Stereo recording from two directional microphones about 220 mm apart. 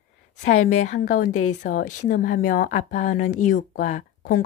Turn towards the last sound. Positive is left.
turn(degrees=40)  # may be behind; listen again after turning